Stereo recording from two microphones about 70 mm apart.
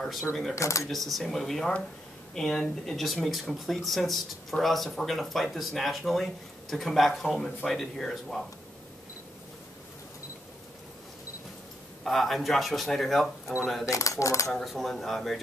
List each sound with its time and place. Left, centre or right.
0.0 s speech: centre
0.6 s speech: left
0.8 s speech: centre
12.0 s speech: centre
13.8 s speech: left
14.5 s speech: centre